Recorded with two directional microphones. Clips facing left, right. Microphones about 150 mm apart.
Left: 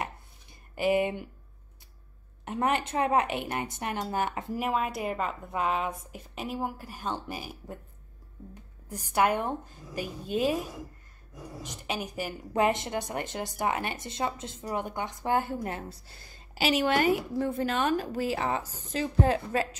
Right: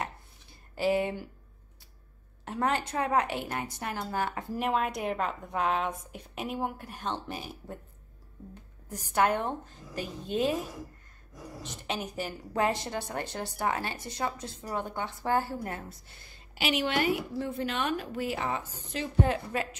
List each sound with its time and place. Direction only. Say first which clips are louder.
0.7 s a woman's voice: left 2 dB; 15° left (ahead or behind)
2.4 s a woman's voice: left 2 dB; 20° left (ahead or behind)
4.6 s a woman's voice: right 1 dB; centre (ahead or behind)
8.8 s a woman's voice: left 1 dB; 10° left (ahead or behind)
11.6 s a woman's voice: left 1 dB; 10° left (ahead or behind)
16.5 s a woman's voice: left 3 dB; 35° left (ahead or behind)